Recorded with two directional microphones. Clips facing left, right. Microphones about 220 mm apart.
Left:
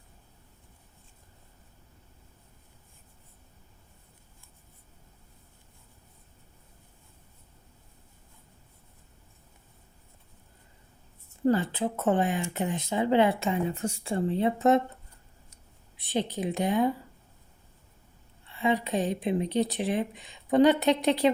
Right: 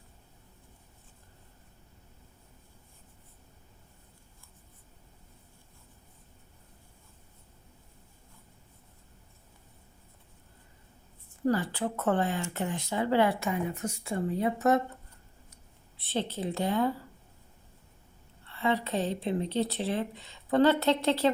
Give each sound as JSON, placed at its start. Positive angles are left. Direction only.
{"t": 11.4, "sound": "speech", "side_deg": 25}
{"t": 16.0, "sound": "speech", "side_deg": 15}
{"t": 18.4, "sound": "speech", "side_deg": 15}